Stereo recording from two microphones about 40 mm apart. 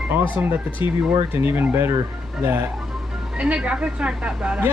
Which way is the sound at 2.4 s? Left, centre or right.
Right.